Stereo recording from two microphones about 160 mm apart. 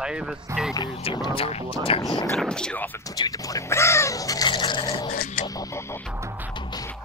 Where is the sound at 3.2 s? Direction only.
20° left (ahead or behind).